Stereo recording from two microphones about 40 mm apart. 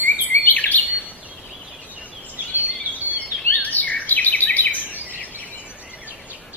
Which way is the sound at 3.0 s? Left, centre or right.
Left.